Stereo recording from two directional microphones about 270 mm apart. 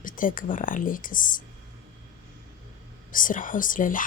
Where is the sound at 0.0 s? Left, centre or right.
Left.